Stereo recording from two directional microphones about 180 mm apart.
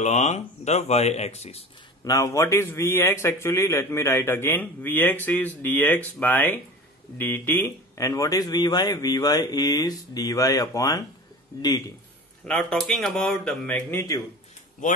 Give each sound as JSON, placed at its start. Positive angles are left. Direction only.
{"t": 0.0, "sound": "speech", "side_deg": 40}
{"t": 2.0, "sound": "a man's voice", "side_deg": 15}
{"t": 12.4, "sound": "speech", "side_deg": 5}
{"t": 14.8, "sound": "speech", "side_deg": 45}